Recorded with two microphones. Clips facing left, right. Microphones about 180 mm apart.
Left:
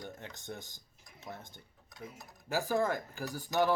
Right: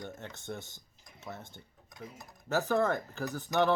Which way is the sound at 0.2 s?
15° left (ahead or behind).